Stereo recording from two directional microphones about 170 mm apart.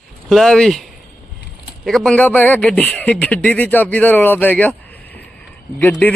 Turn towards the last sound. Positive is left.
turn(degrees=10)  # may be behind; listen again after turning